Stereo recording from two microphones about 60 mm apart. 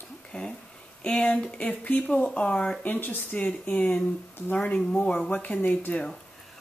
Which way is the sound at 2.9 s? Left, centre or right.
Left.